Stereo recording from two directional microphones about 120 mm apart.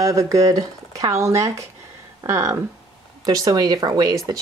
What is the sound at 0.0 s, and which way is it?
Speech, 25° right (ahead or behind).